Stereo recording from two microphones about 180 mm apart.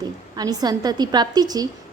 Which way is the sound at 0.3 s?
20° right (ahead or behind).